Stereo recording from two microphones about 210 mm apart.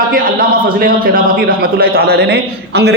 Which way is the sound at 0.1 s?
45° right (ahead or behind).